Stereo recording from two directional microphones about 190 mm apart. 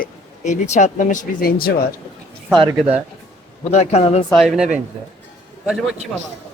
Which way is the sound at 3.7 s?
35° left (ahead or behind).